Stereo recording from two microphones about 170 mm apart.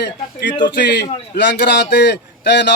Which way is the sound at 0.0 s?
90° left.